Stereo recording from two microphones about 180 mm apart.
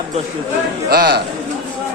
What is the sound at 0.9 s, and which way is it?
Speech, 60° right (ahead or behind).